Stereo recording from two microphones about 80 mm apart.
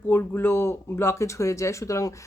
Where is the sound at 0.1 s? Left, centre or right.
Left.